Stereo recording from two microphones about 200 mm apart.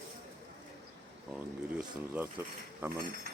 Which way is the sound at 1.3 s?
5° right (ahead or behind).